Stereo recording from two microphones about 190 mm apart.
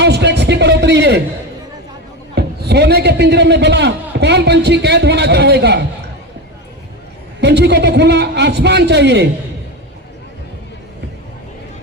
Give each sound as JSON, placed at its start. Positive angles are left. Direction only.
{"t": 0.0, "sound": "a sound", "side_deg": -60}
{"t": 2.3, "sound": "a man's voice", "side_deg": -60}
{"t": 7.4, "sound": "a man's voice", "side_deg": -60}